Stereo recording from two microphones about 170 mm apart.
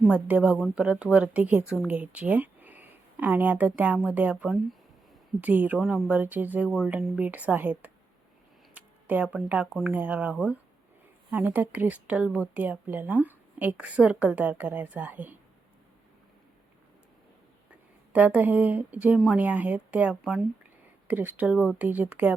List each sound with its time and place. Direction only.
0.0 s speech: 5° right (ahead or behind)
8.7 s a sound: 10° right (ahead or behind)
9.7 s speech: 10° right (ahead or behind)
18.1 s speech: 10° right (ahead or behind)